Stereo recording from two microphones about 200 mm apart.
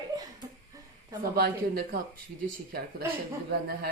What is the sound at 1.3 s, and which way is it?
Speech, 50° right (ahead or behind).